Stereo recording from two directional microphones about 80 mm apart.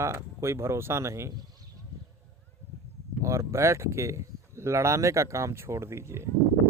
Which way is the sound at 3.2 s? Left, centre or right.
Right.